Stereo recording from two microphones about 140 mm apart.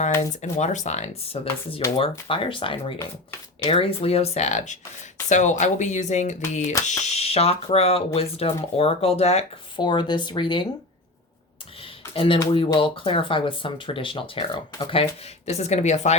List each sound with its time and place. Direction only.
0.4 s speech: 55° left (ahead or behind)
9.7 s speech: 35° left (ahead or behind)
12.1 s speech: 40° left (ahead or behind)
15.4 s speech: 50° left (ahead or behind)